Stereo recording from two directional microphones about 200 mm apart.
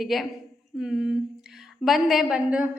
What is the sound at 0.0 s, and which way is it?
A woman's voice, centre (ahead or behind).